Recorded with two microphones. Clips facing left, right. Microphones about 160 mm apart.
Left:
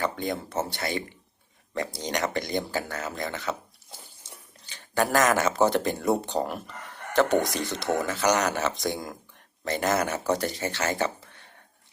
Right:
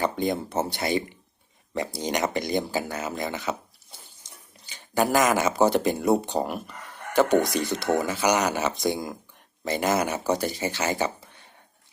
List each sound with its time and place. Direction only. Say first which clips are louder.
0.0 s speech: right 4 dB; 15° right (ahead or behind)
4.7 s speech: right 2 dB; 5° right (ahead or behind)